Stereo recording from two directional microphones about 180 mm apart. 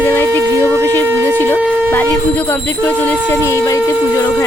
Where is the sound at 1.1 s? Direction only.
15° right (ahead or behind).